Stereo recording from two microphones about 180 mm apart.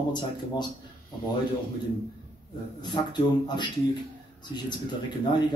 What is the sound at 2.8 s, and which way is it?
Speech, 25° left (ahead or behind).